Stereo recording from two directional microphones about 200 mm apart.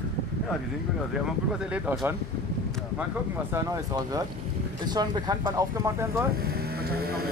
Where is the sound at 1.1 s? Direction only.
5° right (ahead or behind).